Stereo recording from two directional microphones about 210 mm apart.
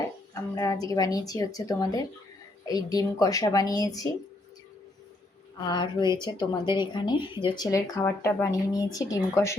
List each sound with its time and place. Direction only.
0.5 s a woman's voice: 15° left (ahead or behind)
5.5 s a woman's voice: 20° left (ahead or behind)